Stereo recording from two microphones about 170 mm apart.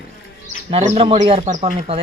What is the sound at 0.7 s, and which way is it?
Speech, 35° right (ahead or behind).